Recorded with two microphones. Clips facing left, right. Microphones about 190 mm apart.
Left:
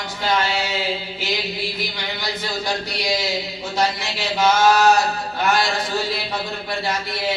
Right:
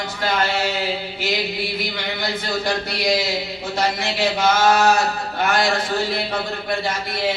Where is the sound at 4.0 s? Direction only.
60° right (ahead or behind).